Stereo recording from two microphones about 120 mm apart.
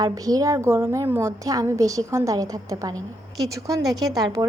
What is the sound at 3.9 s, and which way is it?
Speech, 30° right (ahead or behind).